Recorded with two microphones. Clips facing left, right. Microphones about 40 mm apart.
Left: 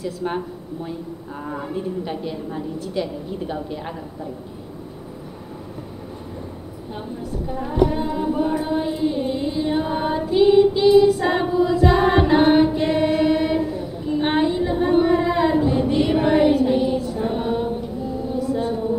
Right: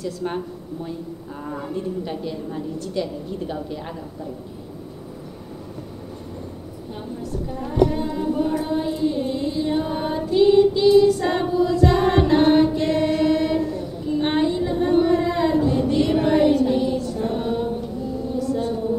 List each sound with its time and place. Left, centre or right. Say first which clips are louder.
0.0 s a woman's voice: left 1 dB; centre
1.4 s a woman's voice: left 1 dB; centre
7.4 s a sound: even; centre